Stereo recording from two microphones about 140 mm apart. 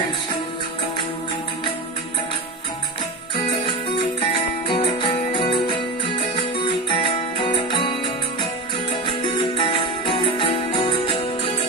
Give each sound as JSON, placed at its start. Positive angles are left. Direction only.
{"t": 3.3, "sound": "music", "side_deg": 35}
{"t": 4.7, "sound": "music", "side_deg": 40}